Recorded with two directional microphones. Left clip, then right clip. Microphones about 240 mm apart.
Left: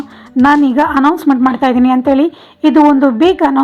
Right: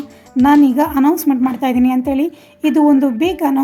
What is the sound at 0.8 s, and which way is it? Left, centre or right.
A woman's voice, centre.